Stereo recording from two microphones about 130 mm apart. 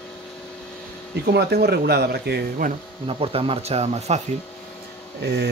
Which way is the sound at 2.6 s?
90° right.